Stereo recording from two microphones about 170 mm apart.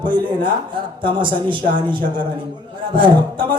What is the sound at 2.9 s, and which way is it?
Speech, 25° right (ahead or behind).